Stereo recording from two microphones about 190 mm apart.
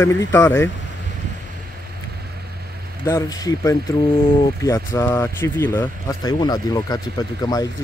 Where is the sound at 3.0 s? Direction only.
20° left (ahead or behind).